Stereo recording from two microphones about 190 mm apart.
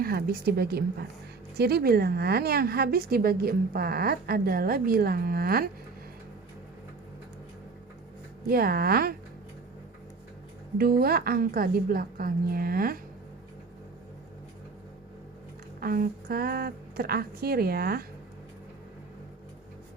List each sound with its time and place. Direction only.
0.0 s a woman's voice: 55° right (ahead or behind)
8.4 s a woman's voice: 50° right (ahead or behind)
10.8 s a woman's voice: 55° right (ahead or behind)
15.8 s a woman's voice: 50° right (ahead or behind)